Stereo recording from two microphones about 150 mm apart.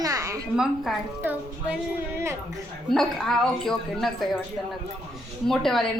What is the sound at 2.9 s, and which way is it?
A woman's voice, centre (ahead or behind).